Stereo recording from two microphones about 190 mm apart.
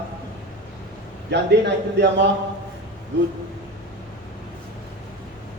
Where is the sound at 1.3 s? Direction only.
65° right (ahead or behind).